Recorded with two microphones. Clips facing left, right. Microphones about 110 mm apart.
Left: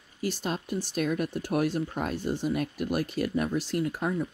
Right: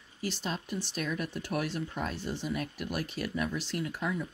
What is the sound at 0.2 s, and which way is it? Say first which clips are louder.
Speech: left 4 dB; 45° left (ahead or behind).